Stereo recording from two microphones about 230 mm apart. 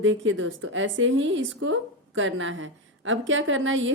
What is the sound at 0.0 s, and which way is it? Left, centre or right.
A woman's voice, right.